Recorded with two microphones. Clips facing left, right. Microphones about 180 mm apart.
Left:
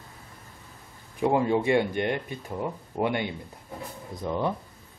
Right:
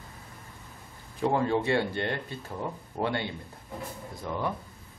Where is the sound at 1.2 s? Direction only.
15° left (ahead or behind).